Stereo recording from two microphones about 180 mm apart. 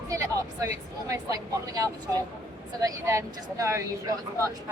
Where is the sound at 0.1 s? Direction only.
20° right (ahead or behind).